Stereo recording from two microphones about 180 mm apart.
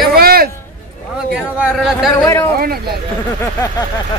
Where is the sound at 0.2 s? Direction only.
55° right (ahead or behind).